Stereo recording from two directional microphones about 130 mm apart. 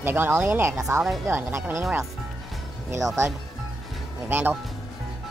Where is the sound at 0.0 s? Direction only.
15° right (ahead or behind).